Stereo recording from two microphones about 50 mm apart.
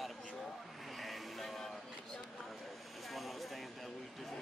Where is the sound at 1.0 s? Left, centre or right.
Centre.